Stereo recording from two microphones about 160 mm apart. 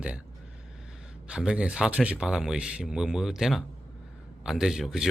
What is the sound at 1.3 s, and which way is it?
Speech, 5° right (ahead or behind).